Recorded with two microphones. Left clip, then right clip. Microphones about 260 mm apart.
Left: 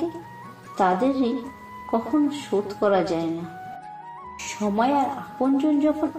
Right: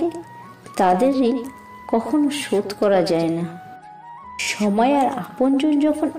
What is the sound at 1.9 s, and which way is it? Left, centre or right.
Speech, right.